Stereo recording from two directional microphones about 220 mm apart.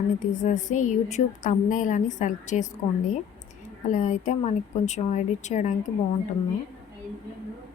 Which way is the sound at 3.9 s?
35° left (ahead or behind).